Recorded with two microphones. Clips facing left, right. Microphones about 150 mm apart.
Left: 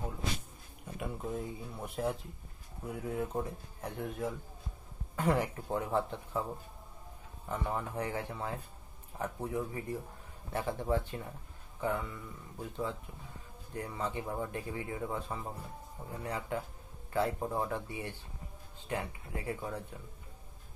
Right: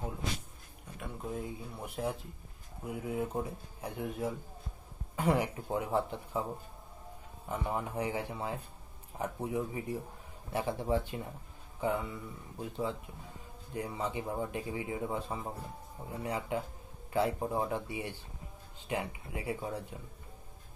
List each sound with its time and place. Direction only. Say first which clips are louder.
0.9 s speech: left 2 dB; 5° left (ahead or behind)
7.4 s speech: right 1 dB; 10° right (ahead or behind)